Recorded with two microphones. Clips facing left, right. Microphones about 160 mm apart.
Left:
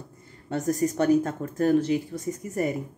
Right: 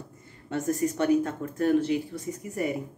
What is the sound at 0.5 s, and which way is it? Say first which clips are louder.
Speech: left 2 dB; 40° left (ahead or behind).